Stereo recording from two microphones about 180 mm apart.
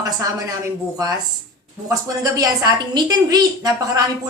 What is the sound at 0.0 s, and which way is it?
Speech, 20° right (ahead or behind).